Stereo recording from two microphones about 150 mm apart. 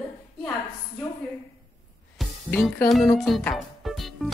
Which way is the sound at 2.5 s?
10° left (ahead or behind).